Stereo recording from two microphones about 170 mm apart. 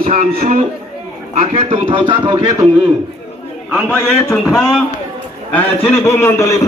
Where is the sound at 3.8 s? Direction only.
10° left (ahead or behind).